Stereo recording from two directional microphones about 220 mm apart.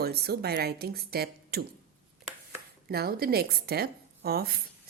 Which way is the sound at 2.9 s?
45° right (ahead or behind).